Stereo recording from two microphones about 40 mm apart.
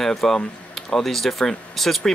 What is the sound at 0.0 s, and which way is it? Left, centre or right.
Speech, centre.